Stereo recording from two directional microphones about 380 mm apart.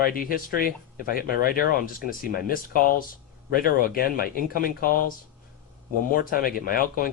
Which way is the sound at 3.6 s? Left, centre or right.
Left.